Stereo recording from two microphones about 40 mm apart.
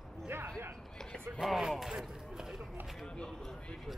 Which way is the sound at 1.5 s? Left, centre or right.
Centre.